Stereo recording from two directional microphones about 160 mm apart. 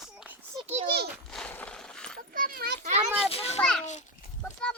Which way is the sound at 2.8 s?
45° right (ahead or behind).